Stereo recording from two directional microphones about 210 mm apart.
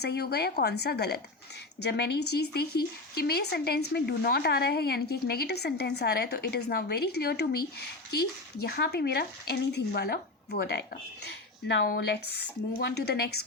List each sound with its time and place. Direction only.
0.0 s speech: 50° left (ahead or behind)
8.6 s speech: 50° left (ahead or behind)